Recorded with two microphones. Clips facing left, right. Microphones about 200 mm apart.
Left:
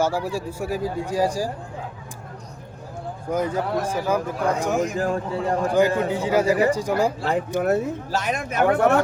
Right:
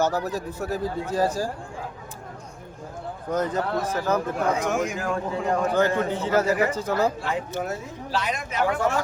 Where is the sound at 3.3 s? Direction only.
10° left (ahead or behind).